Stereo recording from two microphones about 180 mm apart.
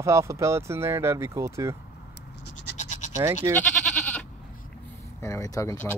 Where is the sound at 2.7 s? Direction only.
40° left (ahead or behind).